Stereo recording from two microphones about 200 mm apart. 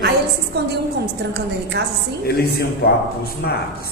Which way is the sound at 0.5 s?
55° right (ahead or behind).